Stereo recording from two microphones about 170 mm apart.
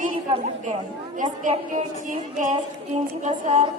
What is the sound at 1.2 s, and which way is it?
A woman's voice, 50° right (ahead or behind).